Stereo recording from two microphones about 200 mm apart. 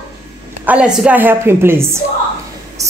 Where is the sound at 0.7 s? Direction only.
5° right (ahead or behind).